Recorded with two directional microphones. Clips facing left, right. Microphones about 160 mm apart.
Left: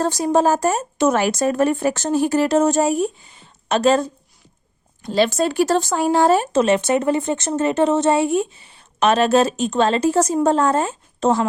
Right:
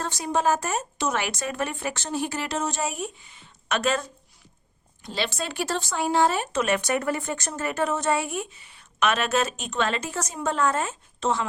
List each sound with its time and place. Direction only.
0.0 s speech: 40° left (ahead or behind)
5.0 s speech: 45° left (ahead or behind)